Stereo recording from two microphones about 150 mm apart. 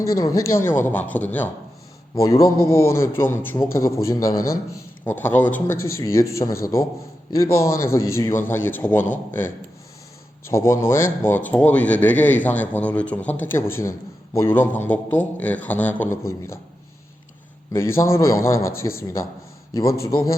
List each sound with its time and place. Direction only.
0.0 s speech: 20° left (ahead or behind)
2.1 s a man's voice: 20° left (ahead or behind)
17.7 s a man's voice: 15° left (ahead or behind)